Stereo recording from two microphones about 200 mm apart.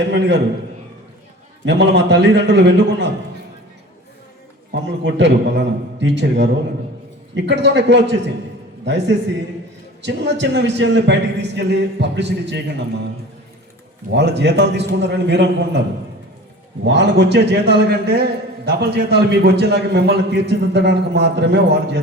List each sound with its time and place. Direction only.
0.1 s a man's voice: 60° right (ahead or behind)
1.6 s a man's voice: 60° right (ahead or behind)
4.7 s a man's voice: 60° right (ahead or behind)
14.1 s a man's voice: 60° right (ahead or behind)
16.8 s a man's voice: 60° right (ahead or behind)